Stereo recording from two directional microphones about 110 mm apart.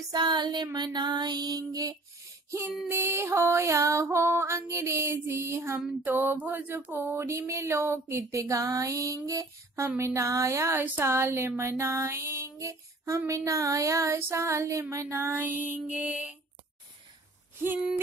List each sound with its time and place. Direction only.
0.1 s music: 40° right (ahead or behind)
2.9 s music: 20° right (ahead or behind)